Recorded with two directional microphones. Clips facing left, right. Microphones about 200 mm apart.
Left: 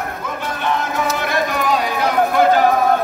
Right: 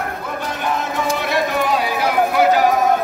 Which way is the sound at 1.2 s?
5° right (ahead or behind).